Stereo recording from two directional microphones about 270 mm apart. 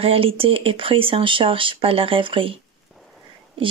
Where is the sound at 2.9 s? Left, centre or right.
Centre.